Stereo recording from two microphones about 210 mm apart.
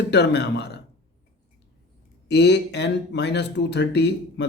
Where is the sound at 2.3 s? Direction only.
55° left (ahead or behind).